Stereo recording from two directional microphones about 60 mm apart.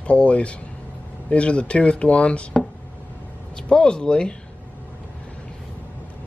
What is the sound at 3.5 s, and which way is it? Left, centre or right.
Speech, centre.